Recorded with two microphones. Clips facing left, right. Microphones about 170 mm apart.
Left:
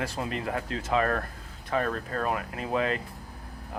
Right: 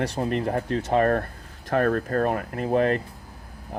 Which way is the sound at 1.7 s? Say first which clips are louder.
Right 7 dB; 55° right (ahead or behind).